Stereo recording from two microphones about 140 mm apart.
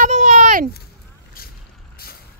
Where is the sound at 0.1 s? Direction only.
55° right (ahead or behind).